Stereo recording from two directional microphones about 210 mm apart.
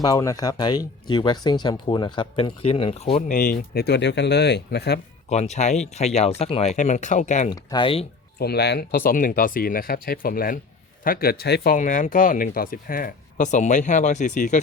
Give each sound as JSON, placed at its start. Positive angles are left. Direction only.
{"t": 0.0, "sound": "speech", "side_deg": 15}
{"t": 5.3, "sound": "speech", "side_deg": 30}
{"t": 7.5, "sound": "speech", "side_deg": 20}
{"t": 8.4, "sound": "speech", "side_deg": 50}